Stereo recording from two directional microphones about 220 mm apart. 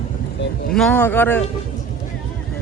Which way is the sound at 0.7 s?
5° left (ahead or behind).